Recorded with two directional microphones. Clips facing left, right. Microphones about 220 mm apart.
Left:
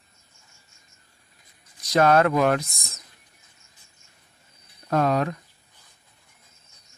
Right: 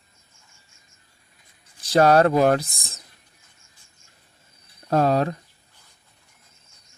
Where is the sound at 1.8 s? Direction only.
30° right (ahead or behind).